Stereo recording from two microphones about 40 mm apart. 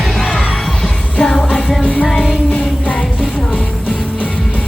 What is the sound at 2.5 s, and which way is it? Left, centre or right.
Music, left.